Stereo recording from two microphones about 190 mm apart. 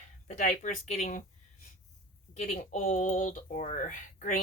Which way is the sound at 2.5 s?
45° left (ahead or behind).